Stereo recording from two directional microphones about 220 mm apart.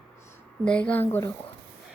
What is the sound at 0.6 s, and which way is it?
Speech, 5° left (ahead or behind).